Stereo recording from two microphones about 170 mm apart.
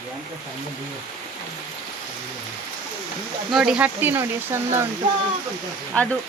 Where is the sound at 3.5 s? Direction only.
5° right (ahead or behind).